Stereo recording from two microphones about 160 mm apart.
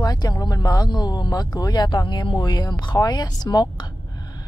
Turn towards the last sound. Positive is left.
turn(degrees=25)  # may be behind; listen again after turning